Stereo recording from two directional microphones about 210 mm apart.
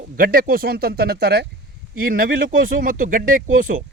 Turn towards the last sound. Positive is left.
turn(degrees=-40)  # may be behind; listen again after turning